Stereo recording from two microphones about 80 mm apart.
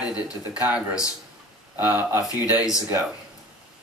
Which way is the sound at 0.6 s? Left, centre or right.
Centre.